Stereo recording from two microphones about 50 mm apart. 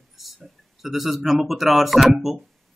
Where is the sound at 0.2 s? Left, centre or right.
Centre.